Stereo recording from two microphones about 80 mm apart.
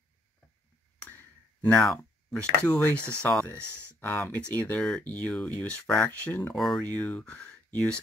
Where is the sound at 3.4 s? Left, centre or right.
Left.